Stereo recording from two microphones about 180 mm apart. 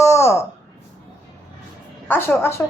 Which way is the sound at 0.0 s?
15° left (ahead or behind).